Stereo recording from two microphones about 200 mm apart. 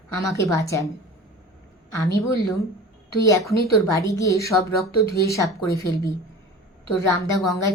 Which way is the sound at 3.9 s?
15° left (ahead or behind).